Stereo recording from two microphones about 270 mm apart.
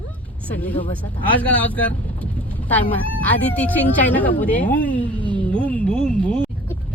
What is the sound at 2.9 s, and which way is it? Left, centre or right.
Speech, centre.